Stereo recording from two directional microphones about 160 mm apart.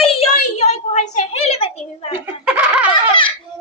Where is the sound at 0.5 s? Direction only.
45° left (ahead or behind).